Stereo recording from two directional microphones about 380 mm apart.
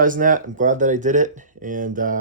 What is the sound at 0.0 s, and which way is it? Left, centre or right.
Speech, right.